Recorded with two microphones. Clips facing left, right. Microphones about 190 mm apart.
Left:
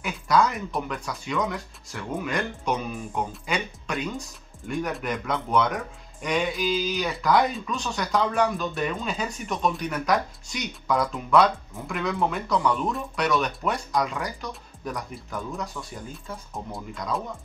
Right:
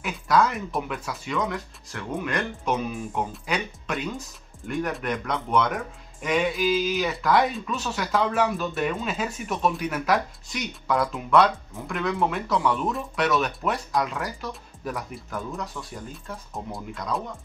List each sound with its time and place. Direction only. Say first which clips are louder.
0.0 s speech: even; centre (ahead or behind)